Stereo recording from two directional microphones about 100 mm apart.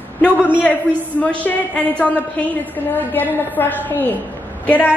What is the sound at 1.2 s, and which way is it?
A woman's voice, 15° left (ahead or behind).